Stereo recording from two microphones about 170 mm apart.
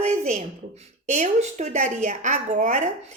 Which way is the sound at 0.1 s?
45° right (ahead or behind).